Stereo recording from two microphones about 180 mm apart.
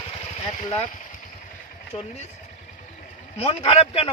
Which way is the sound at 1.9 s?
35° left (ahead or behind).